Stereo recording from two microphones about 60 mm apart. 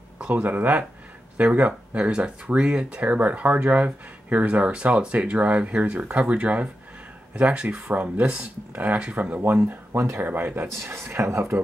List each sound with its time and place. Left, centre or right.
0.3 s speech: right
9.7 s speech: right